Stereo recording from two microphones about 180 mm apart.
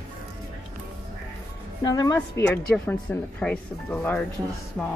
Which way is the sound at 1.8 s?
20° left (ahead or behind).